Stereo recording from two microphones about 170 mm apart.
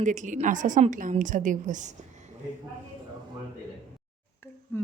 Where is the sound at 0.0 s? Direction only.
45° right (ahead or behind).